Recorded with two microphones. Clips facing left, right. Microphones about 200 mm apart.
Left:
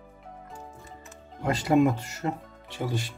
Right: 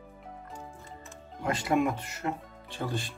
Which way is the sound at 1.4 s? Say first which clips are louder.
Left 5 dB; 25° left (ahead or behind).